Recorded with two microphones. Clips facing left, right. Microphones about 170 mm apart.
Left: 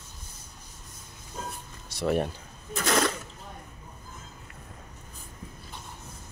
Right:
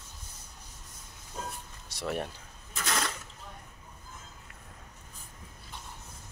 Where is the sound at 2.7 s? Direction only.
65° left (ahead or behind).